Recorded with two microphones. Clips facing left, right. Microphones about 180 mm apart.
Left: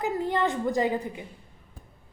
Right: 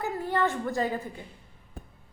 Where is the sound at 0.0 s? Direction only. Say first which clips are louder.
Left 2 dB; 20° left (ahead or behind).